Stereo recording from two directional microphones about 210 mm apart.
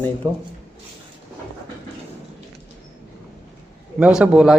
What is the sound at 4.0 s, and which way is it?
Speech, 5° right (ahead or behind).